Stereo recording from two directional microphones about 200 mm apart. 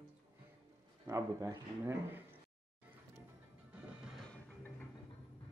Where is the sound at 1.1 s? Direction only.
15° right (ahead or behind).